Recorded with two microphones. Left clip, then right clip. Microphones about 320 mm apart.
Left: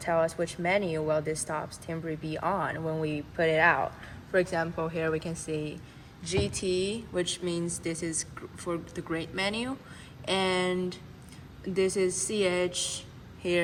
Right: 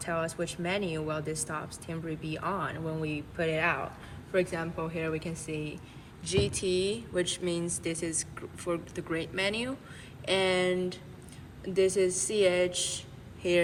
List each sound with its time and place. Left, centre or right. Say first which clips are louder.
0.0 s speech: left 5 dB; left